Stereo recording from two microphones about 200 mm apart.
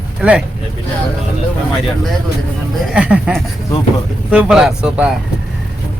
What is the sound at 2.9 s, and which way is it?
Speech, 5° right (ahead or behind).